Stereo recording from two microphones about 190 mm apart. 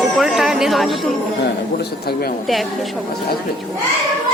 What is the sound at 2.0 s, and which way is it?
Speech, 55° left (ahead or behind).